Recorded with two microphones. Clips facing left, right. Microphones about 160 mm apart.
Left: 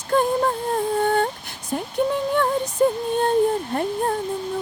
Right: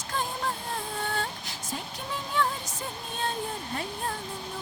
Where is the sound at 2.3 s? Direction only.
55° left (ahead or behind).